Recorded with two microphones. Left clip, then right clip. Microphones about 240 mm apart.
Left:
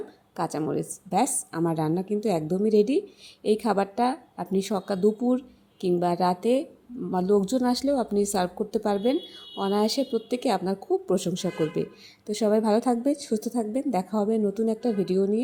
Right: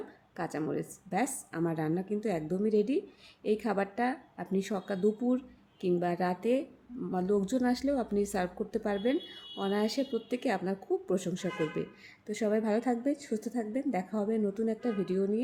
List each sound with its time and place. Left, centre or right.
0.3 s speech: centre